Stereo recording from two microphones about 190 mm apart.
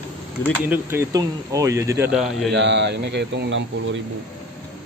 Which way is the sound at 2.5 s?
65° right (ahead or behind).